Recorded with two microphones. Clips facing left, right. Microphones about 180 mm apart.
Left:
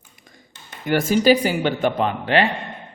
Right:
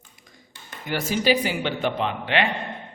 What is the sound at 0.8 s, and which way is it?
Speech, 50° left (ahead or behind).